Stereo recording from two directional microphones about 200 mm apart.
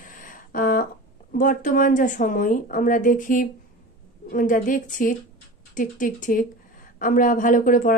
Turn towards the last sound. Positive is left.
turn(degrees=40)  # may be behind; listen again after turning